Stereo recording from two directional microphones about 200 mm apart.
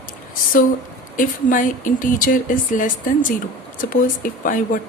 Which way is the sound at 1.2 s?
40° left (ahead or behind).